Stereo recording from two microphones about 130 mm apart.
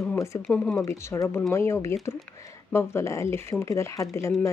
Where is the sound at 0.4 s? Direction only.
10° left (ahead or behind).